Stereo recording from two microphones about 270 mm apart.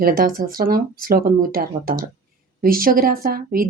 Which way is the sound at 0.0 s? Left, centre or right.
Right.